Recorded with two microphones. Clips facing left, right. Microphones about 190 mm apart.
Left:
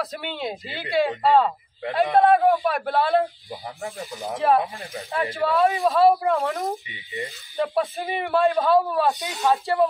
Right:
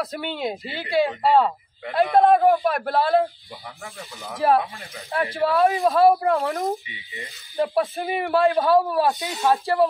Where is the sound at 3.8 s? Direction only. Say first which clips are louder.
Left 8 dB; 35° left (ahead or behind).